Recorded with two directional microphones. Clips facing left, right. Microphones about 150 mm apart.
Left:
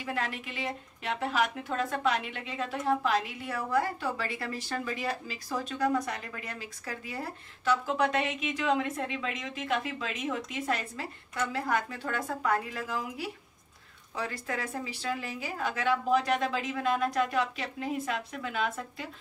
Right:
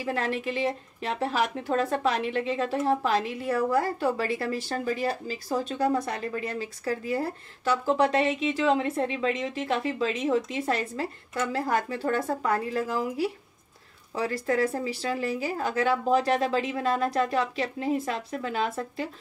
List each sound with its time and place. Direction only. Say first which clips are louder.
0.0 s a woman's voice: right 6 dB; 35° right (ahead or behind)